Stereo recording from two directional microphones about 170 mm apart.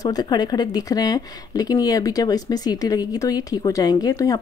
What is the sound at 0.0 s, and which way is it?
A woman's voice, 25° left (ahead or behind).